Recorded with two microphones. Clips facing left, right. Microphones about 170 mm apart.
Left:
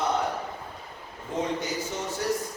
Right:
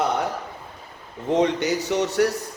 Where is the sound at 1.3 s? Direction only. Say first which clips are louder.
Right 9 dB; 75° right (ahead or behind).